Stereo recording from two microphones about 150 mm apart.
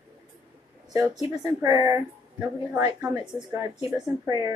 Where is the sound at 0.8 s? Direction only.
25° right (ahead or behind).